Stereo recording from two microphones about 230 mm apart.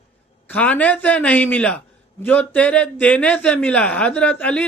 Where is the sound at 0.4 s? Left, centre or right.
Centre.